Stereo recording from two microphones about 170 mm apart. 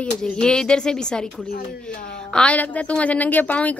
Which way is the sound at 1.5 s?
65° left (ahead or behind).